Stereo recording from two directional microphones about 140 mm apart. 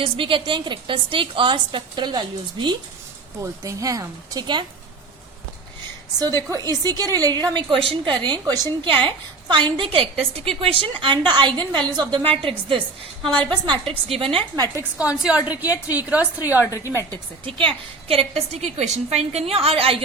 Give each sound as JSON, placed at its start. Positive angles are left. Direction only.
{"t": 0.0, "sound": "a woman's voice", "side_deg": -40}
{"t": 6.1, "sound": "a woman's voice", "side_deg": -25}
{"t": 14.9, "sound": "a woman's voice", "side_deg": -5}
{"t": 16.6, "sound": "a woman's voice", "side_deg": 20}
{"t": 17.1, "sound": "a woman's voice", "side_deg": -35}